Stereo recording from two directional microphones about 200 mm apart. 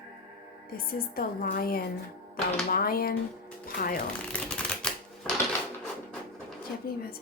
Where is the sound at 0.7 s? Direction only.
45° left (ahead or behind).